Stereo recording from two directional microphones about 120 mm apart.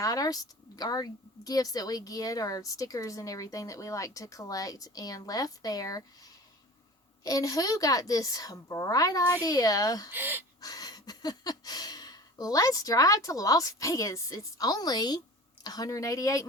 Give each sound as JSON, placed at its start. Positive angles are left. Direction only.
{"t": 0.0, "sound": "a woman's voice", "side_deg": 30}
{"t": 10.1, "sound": "speech", "side_deg": -15}
{"t": 10.6, "sound": "a woman's voice", "side_deg": 30}